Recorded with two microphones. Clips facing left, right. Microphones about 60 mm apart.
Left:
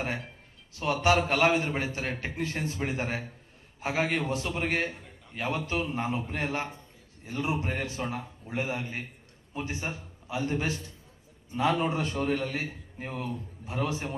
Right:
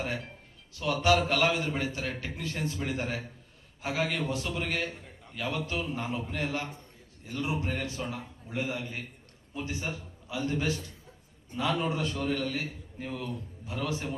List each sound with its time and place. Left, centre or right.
0.8 s a man's voice: left